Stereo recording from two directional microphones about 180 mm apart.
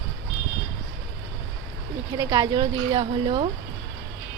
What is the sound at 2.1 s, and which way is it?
Speech, 20° right (ahead or behind).